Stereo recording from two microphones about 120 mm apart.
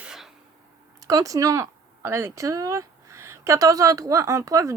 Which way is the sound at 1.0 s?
30° right (ahead or behind).